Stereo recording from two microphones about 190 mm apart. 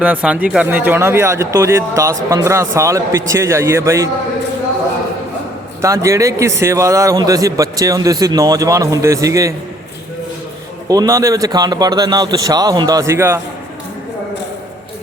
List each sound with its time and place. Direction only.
0.0 s a man's voice: 5° right (ahead or behind)
5.8 s a man's voice: 15° right (ahead or behind)
10.8 s speech: 20° right (ahead or behind)